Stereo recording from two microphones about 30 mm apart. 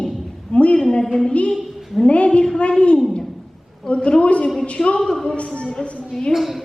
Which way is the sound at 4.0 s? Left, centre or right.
Left.